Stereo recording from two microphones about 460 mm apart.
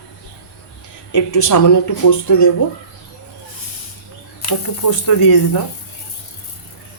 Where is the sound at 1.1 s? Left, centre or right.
Left.